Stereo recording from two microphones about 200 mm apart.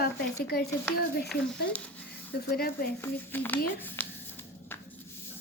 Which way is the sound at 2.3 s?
50° left (ahead or behind).